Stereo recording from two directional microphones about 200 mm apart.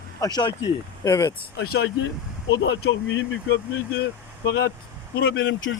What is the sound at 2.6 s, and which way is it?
Speech, 70° left (ahead or behind).